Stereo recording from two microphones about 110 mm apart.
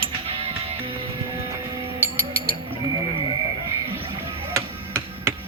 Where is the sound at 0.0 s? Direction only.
60° right (ahead or behind).